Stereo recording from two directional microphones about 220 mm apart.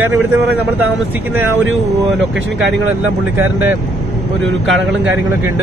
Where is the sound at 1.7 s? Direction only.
60° right (ahead or behind).